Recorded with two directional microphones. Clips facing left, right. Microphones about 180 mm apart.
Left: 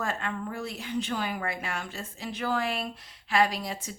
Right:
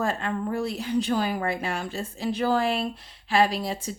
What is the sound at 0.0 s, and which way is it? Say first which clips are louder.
Speech: right 5 dB; 35° right (ahead or behind).